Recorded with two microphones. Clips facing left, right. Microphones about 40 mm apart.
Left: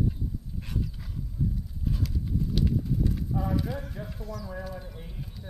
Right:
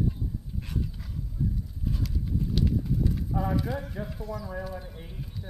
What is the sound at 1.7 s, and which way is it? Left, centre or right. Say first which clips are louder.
Horse: left 1 dB; centre.